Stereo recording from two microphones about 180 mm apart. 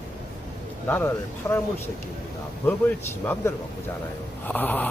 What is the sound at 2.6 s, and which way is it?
Speech, 10° left (ahead or behind).